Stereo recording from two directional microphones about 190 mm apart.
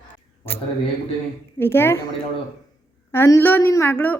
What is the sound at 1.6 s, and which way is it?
Speech, 10° left (ahead or behind).